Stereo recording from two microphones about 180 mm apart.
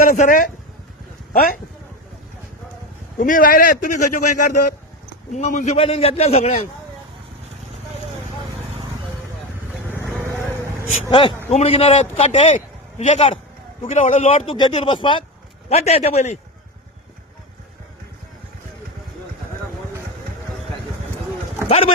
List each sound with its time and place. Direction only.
0.1 s a man's voice: 45° left (ahead or behind)
3.2 s a man's voice: 50° left (ahead or behind); by 6.7 s 35° left (ahead or behind)
10.8 s a man's voice: 30° left (ahead or behind)
14.5 s a man's voice: 25° left (ahead or behind)
21.7 s a man's voice: 35° left (ahead or behind)